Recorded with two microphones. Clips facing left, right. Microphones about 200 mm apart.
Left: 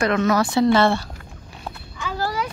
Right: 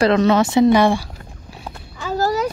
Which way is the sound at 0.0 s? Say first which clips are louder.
Right 5 dB; 30° right (ahead or behind).